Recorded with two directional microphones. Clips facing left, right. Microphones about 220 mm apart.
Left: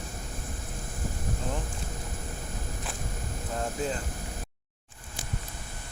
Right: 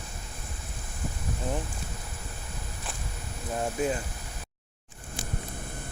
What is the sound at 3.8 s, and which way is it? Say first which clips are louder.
Speech: right 4 dB; 15° right (ahead or behind).